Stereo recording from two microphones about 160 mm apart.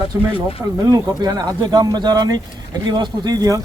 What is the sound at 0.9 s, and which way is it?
A man's voice, 25° right (ahead or behind).